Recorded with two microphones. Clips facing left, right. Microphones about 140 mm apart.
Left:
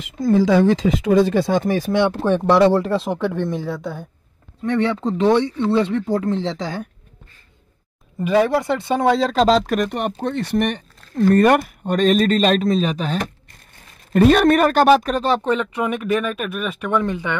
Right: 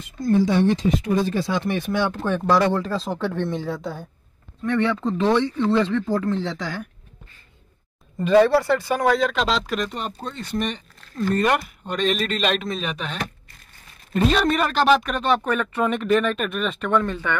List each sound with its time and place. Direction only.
0.0 s speech: 90° left; by 2.0 s 35° left (ahead or behind)
2.0 s speech: 25° left (ahead or behind)
3.2 s speech: 15° left (ahead or behind)
3.6 s a woman's voice: centre (ahead or behind)
4.7 s speech: 20° left (ahead or behind)
8.2 s speech: 10° left (ahead or behind); by 13.2 s 35° left (ahead or behind)
14.1 s speech: 55° left (ahead or behind); by 17.4 s 15° left (ahead or behind)